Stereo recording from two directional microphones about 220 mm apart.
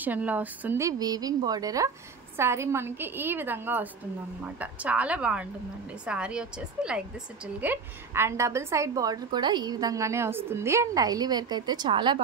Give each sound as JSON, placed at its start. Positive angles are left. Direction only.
{"t": 0.0, "sound": "a woman's voice", "side_deg": -5}